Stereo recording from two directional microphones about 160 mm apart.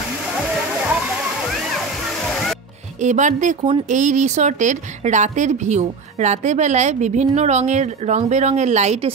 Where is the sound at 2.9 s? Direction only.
50° right (ahead or behind).